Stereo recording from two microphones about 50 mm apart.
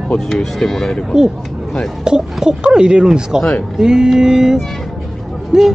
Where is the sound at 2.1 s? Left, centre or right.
Centre.